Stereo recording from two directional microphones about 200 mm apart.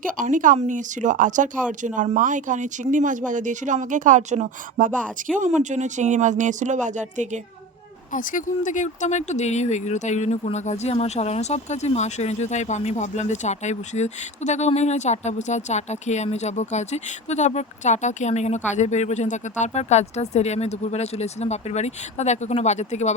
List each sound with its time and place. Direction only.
0.0 s speech: 40° right (ahead or behind)
4.9 s speech: 5° left (ahead or behind)
5.5 s speech: 35° right (ahead or behind)
8.1 s speech: 40° left (ahead or behind)